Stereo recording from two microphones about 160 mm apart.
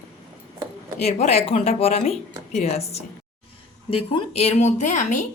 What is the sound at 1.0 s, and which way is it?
A woman's voice, 40° left (ahead or behind).